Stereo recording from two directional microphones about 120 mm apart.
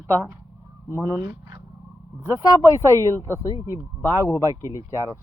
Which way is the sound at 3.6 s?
25° right (ahead or behind).